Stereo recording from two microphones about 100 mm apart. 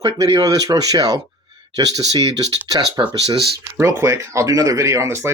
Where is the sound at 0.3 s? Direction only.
40° right (ahead or behind).